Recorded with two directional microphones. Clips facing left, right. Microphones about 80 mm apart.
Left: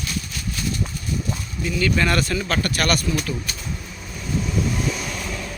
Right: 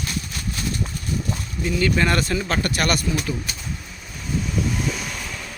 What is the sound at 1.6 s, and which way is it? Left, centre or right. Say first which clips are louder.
Speech: right 1 dB; right.